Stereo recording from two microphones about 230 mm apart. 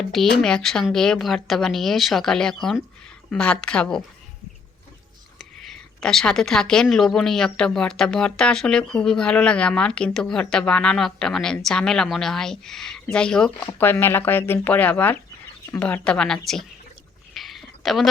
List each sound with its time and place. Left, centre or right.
0.0 s a woman's voice: centre
5.4 s a woman's voice: centre
17.3 s a sound: centre